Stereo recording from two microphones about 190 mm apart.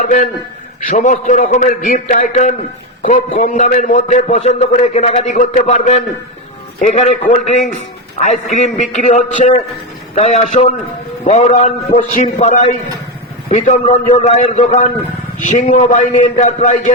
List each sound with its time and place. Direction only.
0.0 s a man's voice: 40° left (ahead or behind)
13.8 s a man's voice: 25° left (ahead or behind)